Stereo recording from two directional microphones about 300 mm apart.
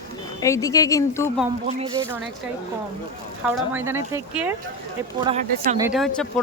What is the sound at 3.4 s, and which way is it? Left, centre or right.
Speech, centre.